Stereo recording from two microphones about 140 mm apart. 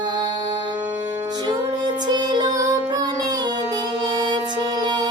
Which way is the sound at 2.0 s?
30° right (ahead or behind).